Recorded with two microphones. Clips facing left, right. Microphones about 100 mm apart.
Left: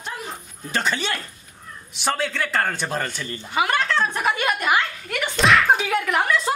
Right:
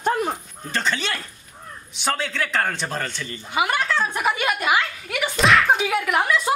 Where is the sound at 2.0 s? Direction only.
Centre (ahead or behind).